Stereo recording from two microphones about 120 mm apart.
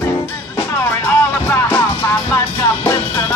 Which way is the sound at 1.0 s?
20° left (ahead or behind).